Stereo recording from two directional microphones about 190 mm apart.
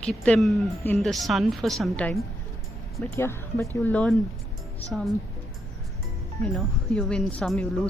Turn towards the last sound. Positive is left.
turn(degrees=5)  # may be behind; listen again after turning